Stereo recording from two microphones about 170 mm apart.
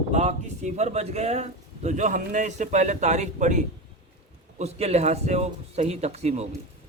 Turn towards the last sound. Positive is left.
turn(degrees=-40)  # may be behind; listen again after turning